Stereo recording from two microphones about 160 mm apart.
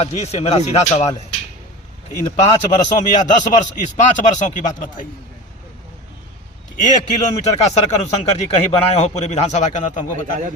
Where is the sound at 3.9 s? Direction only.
50° left (ahead or behind).